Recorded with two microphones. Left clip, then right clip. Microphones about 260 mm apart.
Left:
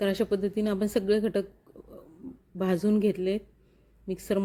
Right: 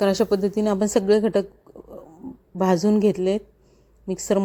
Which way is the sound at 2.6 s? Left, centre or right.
Centre.